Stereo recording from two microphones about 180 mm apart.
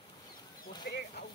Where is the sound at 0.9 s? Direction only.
65° left (ahead or behind).